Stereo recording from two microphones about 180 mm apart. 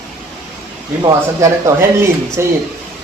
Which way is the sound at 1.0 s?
15° right (ahead or behind).